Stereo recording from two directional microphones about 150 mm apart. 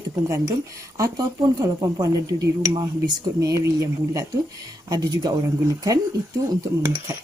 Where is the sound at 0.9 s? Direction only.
20° right (ahead or behind).